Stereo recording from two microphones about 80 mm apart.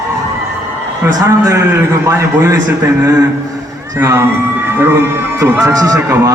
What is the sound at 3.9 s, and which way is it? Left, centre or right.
A man's voice, right.